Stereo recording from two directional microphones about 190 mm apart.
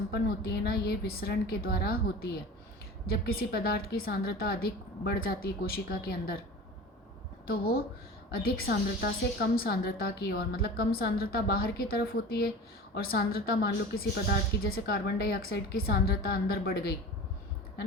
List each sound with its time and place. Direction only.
0.1 s a woman's voice: 55° left (ahead or behind)
7.4 s a woman's voice: 50° left (ahead or behind)